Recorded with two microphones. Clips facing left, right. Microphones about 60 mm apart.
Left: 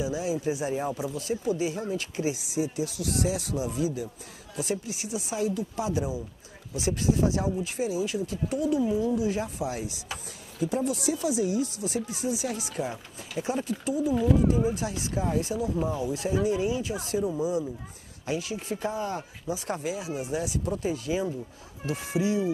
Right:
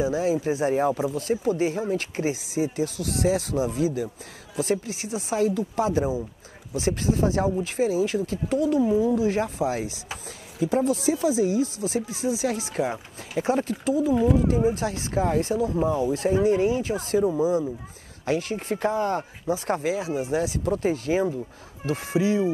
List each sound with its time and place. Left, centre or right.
0.0 s speech: right
14.1 s speech: centre
14.7 s speech: right
18.2 s speech: right
20.1 s speech: right